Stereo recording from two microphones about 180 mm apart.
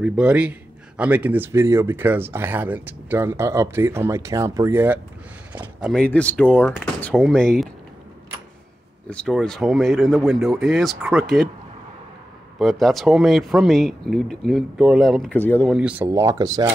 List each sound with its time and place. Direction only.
0.0 s speech: 5° right (ahead or behind)
9.1 s speech: 5° left (ahead or behind)
12.5 s speech: centre (ahead or behind)
15.7 s speech: 5° right (ahead or behind)